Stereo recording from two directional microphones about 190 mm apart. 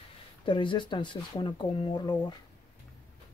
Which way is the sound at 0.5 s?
25° left (ahead or behind).